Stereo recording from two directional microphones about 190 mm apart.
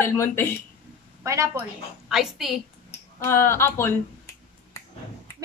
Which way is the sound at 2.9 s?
10° left (ahead or behind).